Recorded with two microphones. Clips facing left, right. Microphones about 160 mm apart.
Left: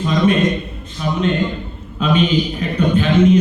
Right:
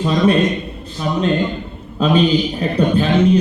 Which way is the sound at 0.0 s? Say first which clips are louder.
Right 1 dB; 35° right (ahead or behind).